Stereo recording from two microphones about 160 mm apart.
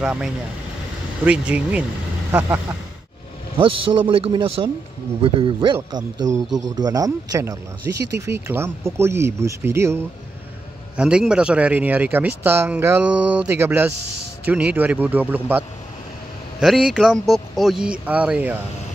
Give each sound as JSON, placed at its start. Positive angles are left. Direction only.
{"t": 0.0, "sound": "speech", "side_deg": -5}
{"t": 3.5, "sound": "a man's voice", "side_deg": -35}
{"t": 8.0, "sound": "speech", "side_deg": -90}
{"t": 8.5, "sound": "speech", "side_deg": -15}